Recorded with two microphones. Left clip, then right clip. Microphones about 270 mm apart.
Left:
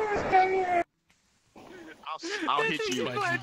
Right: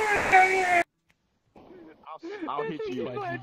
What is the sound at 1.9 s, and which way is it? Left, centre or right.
Speech, left.